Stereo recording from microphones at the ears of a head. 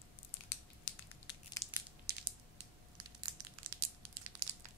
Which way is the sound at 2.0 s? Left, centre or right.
Right.